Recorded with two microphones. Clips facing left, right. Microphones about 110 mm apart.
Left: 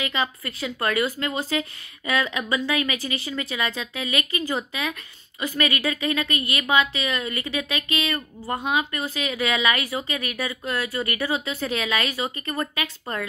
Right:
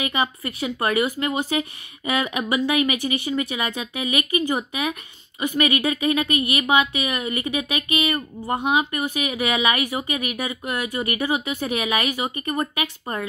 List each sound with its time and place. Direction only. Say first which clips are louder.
0.4 s speech: right 3 dB; 20° right (ahead or behind)